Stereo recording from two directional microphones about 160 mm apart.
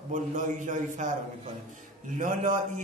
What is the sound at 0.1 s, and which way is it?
Speech, 50° right (ahead or behind).